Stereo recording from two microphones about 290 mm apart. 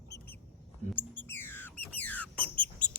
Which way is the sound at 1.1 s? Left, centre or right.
Centre.